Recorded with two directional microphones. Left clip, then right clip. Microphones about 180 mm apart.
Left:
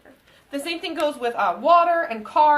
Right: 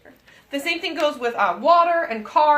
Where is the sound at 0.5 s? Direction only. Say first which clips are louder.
Right 4 dB; 35° right (ahead or behind).